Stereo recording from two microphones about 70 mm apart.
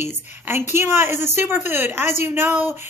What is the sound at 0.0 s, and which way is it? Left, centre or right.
A woman's voice, right.